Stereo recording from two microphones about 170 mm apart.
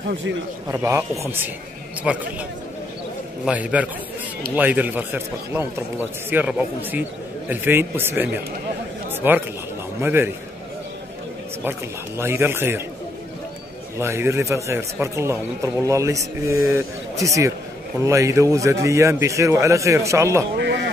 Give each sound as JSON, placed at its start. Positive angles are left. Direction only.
{"t": 0.7, "sound": "a man's voice", "side_deg": -15}
{"t": 3.4, "sound": "speech", "side_deg": -10}
{"t": 12.2, "sound": "speech", "side_deg": -15}
{"t": 13.9, "sound": "speech", "side_deg": -15}
{"t": 20.5, "sound": "sheep", "side_deg": -85}